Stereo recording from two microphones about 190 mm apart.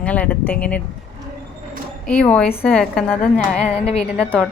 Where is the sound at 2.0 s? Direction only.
5° left (ahead or behind).